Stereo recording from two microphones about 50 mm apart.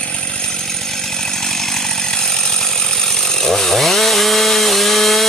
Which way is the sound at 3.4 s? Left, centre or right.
Centre.